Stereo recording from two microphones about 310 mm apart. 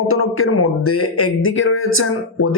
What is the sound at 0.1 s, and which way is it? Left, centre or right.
Speech, left.